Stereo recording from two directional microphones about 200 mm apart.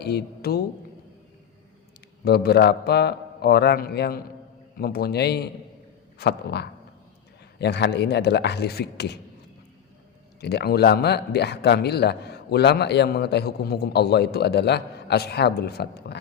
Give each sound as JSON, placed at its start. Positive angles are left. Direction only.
{"t": 0.0, "sound": "a woman's voice", "side_deg": 55}
{"t": 2.2, "sound": "a man's voice", "side_deg": 55}
{"t": 10.4, "sound": "a man's voice", "side_deg": 55}